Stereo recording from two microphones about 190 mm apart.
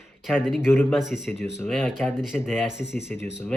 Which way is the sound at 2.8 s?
65° left (ahead or behind).